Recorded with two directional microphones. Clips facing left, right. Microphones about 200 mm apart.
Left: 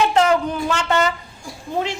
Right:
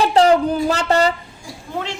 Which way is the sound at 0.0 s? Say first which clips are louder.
Right 3 dB; 35° right (ahead or behind).